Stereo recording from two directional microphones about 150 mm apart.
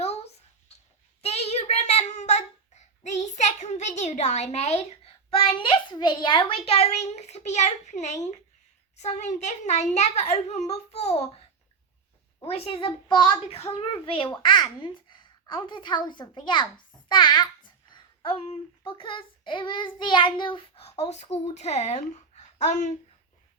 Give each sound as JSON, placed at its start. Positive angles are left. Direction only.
{"t": 0.0, "sound": "a sound", "side_deg": 45}
{"t": 1.2, "sound": "a child's voice", "side_deg": 45}
{"t": 12.5, "sound": "a woman's voice", "side_deg": 40}
{"t": 18.9, "sound": "child singing", "side_deg": 35}